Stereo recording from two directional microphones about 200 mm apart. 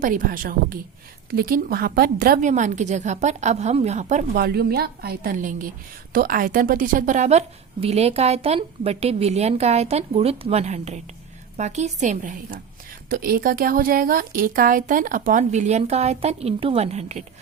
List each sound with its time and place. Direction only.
0.0 s a woman's voice: 45° right (ahead or behind)
4.4 s a woman's voice: 50° right (ahead or behind); by 17.2 s 35° right (ahead or behind)